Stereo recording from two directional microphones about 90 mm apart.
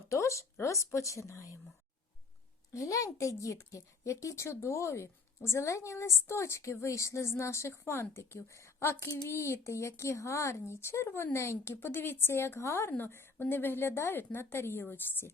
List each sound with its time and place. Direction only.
0.1 s a woman's voice: 35° left (ahead or behind)
2.7 s a woman's voice: 35° left (ahead or behind)